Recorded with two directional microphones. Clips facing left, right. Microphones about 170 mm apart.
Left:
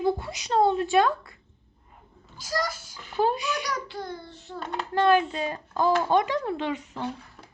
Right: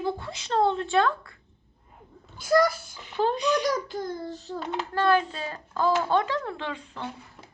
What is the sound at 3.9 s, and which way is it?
Child singing, 40° right (ahead or behind).